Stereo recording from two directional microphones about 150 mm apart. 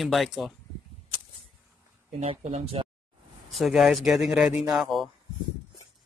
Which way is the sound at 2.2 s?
45° right (ahead or behind).